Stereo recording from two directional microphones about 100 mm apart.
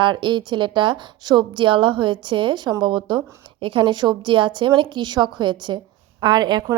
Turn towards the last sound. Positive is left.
turn(degrees=-45)  # may be behind; listen again after turning